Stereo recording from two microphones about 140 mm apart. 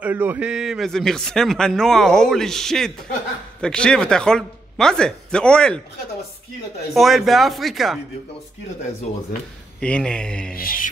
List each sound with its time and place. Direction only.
0.0 s a man's voice: 15° right (ahead or behind); by 5.8 s 5° left (ahead or behind)
6.9 s a man's voice: centre (ahead or behind)
9.8 s speech: 10° left (ahead or behind)
10.5 s mantra: 85° left